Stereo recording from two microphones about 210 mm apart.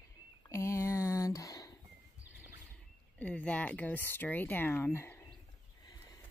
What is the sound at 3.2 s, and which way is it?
Speech, 5° left (ahead or behind).